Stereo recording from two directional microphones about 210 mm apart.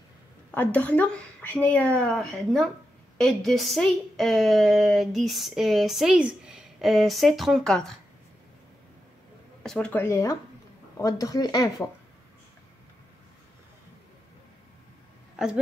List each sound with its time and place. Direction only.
0.6 s a woman's voice: 5° left (ahead or behind)
9.6 s speech: 5° left (ahead or behind)
15.3 s a sound: 5° right (ahead or behind)